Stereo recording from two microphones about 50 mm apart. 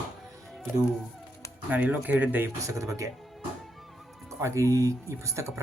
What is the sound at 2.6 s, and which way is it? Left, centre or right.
Speech, right.